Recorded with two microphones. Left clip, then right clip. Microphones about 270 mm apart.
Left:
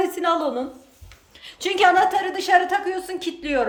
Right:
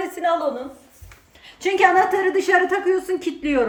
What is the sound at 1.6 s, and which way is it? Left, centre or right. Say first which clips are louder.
A woman's voice: right 1 dB; centre.